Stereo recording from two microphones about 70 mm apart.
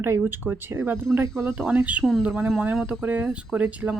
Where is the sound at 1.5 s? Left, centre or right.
Centre.